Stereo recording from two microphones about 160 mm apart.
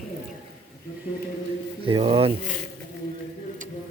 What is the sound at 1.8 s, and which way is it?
Speech, 35° right (ahead or behind).